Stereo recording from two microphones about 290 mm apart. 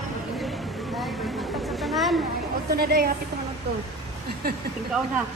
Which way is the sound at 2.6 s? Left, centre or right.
Right.